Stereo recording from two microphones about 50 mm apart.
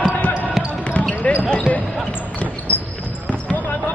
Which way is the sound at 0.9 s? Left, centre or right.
Left.